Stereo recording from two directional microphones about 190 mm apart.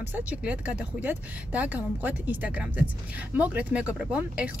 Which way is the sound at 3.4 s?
5° right (ahead or behind).